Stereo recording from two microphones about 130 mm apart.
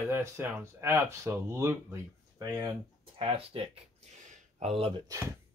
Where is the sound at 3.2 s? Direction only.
45° right (ahead or behind).